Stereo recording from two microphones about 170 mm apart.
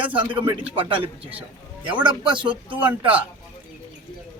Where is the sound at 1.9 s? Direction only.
10° right (ahead or behind).